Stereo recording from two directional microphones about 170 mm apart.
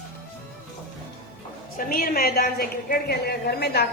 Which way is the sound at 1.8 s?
55° left (ahead or behind).